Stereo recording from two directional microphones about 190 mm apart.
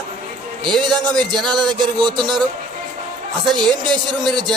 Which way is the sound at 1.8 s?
25° right (ahead or behind).